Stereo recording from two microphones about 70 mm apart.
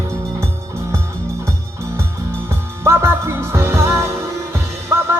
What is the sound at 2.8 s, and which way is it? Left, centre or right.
Music, right.